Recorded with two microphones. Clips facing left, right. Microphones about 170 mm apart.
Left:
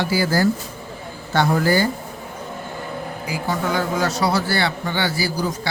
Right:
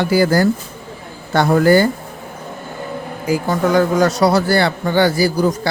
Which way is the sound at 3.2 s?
45° right (ahead or behind).